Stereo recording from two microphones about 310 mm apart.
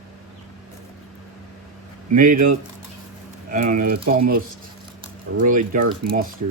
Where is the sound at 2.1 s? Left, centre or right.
Right.